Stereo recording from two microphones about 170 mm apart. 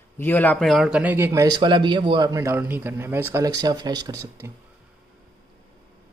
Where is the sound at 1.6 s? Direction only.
25° right (ahead or behind).